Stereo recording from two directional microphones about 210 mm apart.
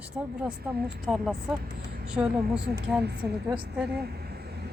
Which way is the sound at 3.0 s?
50° right (ahead or behind).